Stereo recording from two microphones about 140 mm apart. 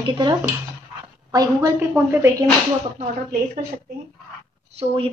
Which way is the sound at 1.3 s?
25° right (ahead or behind).